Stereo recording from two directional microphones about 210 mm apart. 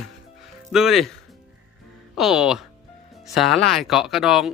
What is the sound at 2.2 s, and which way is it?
Speech, 5° right (ahead or behind).